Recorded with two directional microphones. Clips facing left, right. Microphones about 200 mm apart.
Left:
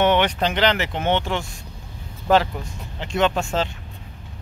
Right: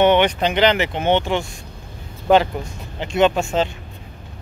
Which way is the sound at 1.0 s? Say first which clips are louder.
Right 4 dB; centre (ahead or behind).